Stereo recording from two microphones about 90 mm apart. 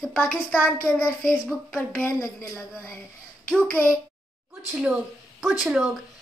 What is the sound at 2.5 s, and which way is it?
Speech, 30° left (ahead or behind).